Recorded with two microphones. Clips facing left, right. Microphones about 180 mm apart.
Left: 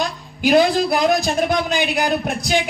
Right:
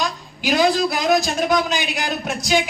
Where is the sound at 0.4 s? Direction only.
55° left (ahead or behind).